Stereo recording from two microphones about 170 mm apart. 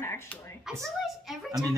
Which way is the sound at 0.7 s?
Centre (ahead or behind).